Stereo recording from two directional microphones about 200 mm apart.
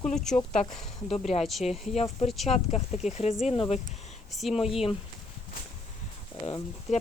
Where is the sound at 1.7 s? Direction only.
Centre (ahead or behind).